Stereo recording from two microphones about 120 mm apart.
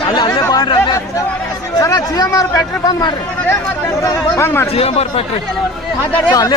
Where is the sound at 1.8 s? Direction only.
30° left (ahead or behind).